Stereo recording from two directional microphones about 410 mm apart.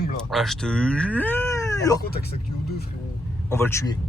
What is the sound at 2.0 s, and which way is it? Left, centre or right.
Speech, left.